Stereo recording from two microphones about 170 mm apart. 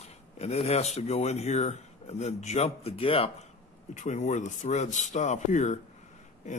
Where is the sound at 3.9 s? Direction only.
45° left (ahead or behind).